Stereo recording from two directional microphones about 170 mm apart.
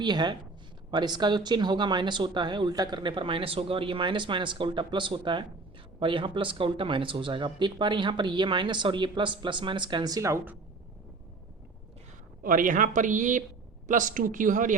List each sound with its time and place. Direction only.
0.0 s speech: 25° right (ahead or behind)
12.4 s speech: 55° right (ahead or behind)